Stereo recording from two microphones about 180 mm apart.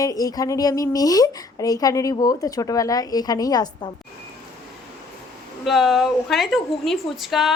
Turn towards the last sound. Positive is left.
turn(degrees=0)  # may be behind; listen again after turning